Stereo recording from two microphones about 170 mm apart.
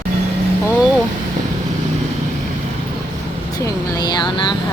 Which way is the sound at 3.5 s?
20° left (ahead or behind).